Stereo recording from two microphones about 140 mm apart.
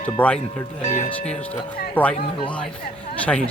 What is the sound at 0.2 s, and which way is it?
Speech, 10° left (ahead or behind).